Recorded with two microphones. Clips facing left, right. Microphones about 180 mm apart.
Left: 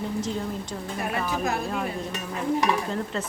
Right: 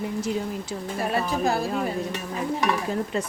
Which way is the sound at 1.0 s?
30° right (ahead or behind).